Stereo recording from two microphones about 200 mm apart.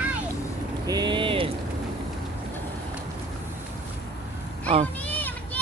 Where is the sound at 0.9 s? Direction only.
20° right (ahead or behind).